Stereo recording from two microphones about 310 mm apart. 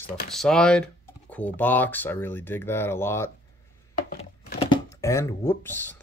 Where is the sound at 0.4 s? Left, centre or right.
Centre.